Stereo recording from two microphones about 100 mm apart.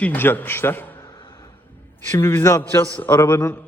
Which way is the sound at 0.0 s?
20° left (ahead or behind).